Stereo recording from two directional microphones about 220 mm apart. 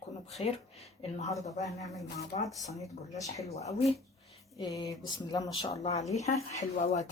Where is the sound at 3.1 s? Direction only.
15° left (ahead or behind).